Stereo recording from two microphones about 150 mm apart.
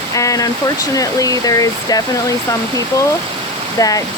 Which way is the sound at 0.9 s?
25° left (ahead or behind).